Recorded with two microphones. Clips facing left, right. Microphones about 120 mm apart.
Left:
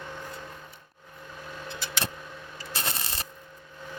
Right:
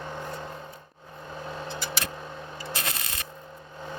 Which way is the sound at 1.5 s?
30° right (ahead or behind).